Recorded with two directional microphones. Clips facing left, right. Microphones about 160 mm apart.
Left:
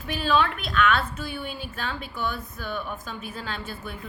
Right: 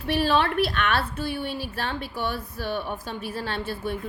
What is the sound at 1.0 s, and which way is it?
A woman's voice, 30° right (ahead or behind).